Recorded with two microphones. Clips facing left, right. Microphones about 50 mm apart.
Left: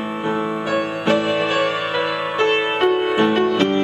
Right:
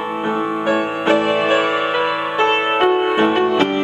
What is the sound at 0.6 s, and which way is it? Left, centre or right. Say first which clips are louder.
Music: right 4 dB; right.